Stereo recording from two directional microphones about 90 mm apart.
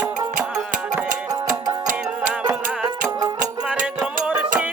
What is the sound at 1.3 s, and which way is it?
Music, 40° right (ahead or behind).